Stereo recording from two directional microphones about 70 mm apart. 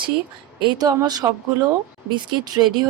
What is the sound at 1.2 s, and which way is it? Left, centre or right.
Speech, right.